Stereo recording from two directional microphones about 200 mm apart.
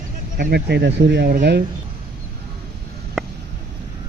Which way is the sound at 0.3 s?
55° right (ahead or behind).